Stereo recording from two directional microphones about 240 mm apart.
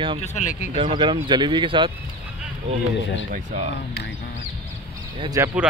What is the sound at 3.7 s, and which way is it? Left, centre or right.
Speech, left.